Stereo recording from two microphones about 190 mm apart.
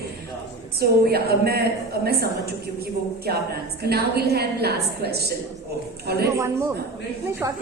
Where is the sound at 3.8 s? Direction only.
55° right (ahead or behind).